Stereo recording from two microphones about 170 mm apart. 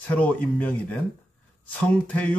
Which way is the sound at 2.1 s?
10° left (ahead or behind).